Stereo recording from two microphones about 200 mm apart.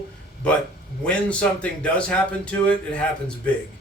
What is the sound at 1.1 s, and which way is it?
Speech, 5° left (ahead or behind).